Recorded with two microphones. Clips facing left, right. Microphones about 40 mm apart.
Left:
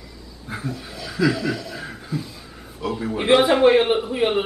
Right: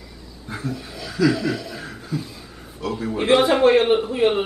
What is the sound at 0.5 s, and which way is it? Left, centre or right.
A man's voice, centre.